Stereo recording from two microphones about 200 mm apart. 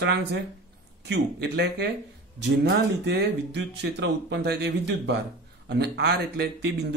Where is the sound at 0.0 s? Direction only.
55° right (ahead or behind).